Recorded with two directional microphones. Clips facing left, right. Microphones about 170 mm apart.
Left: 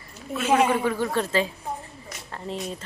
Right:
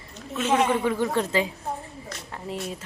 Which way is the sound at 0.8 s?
15° right (ahead or behind).